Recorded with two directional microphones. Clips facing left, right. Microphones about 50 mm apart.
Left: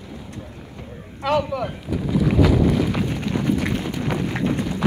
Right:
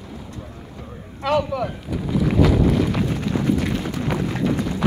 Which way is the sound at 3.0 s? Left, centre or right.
Left.